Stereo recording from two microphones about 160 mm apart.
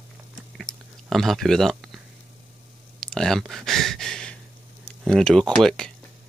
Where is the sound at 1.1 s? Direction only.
Centre (ahead or behind).